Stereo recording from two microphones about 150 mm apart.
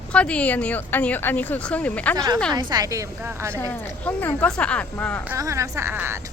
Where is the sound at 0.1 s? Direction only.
10° left (ahead or behind).